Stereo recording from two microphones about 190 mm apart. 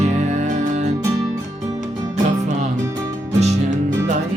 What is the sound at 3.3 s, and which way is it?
Music, 35° right (ahead or behind).